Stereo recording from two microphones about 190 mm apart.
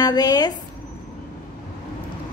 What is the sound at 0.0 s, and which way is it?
Speech, 20° left (ahead or behind).